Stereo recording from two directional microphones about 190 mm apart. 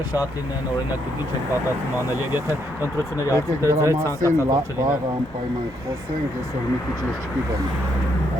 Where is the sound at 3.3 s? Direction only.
15° right (ahead or behind).